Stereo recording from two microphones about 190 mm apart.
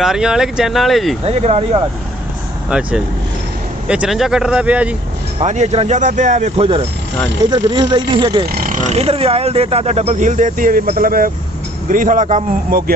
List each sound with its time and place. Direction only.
0.0 s speech: centre (ahead or behind)
1.2 s speech: 35° right (ahead or behind)
2.7 s speech: 5° right (ahead or behind)
5.4 s speech: 35° right (ahead or behind)
8.5 s a man's voice: 45° right (ahead or behind)